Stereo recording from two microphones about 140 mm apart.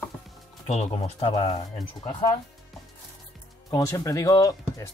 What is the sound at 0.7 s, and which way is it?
Speech, 50° left (ahead or behind).